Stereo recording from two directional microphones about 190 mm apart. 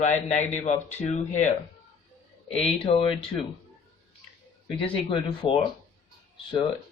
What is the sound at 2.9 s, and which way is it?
Speech, 30° left (ahead or behind).